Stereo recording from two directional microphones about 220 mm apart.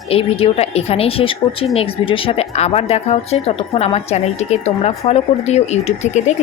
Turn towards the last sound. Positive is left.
turn(degrees=30)  # may be behind; listen again after turning